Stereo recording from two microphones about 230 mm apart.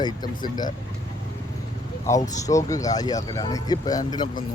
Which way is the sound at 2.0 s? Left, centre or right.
Centre.